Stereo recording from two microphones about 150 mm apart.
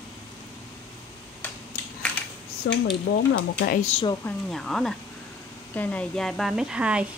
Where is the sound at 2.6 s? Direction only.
90° left.